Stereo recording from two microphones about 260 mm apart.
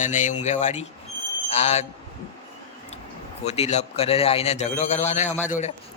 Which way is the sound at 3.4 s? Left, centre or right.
Left.